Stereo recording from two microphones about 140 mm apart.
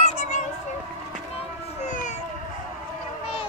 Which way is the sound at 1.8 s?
60° left (ahead or behind).